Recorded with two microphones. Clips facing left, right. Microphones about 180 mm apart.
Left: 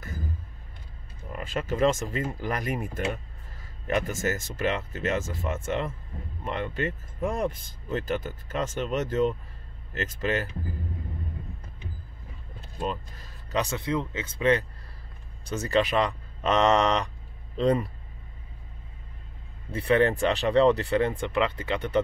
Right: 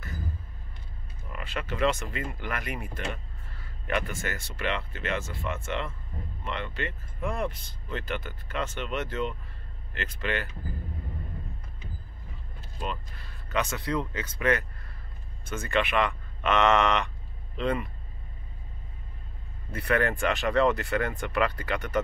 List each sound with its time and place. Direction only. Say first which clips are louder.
1.3 s speech: left 5 dB; 45° left (ahead or behind)
12.7 s speech: left 4 dB; 40° left (ahead or behind)
13.7 s speech: left 1 dB; 25° left (ahead or behind)
19.7 s speech: left 4 dB; 25° left (ahead or behind)